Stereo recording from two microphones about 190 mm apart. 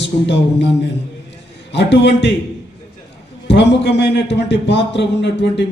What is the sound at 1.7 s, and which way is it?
Speech, 65° left (ahead or behind).